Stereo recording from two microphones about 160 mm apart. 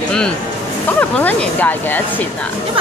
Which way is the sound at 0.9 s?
10° left (ahead or behind).